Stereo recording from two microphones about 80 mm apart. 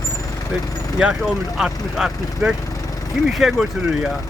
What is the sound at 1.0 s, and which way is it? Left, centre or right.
A man's voice, centre.